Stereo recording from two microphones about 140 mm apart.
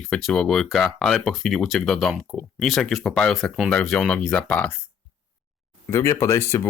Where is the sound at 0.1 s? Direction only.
5° left (ahead or behind).